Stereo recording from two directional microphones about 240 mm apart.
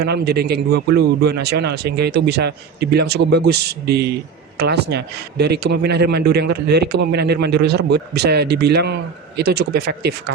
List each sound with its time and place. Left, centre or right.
0.0 s a man's voice: right